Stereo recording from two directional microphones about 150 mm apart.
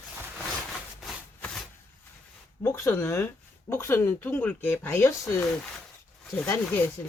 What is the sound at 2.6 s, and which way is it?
Speech, 15° left (ahead or behind).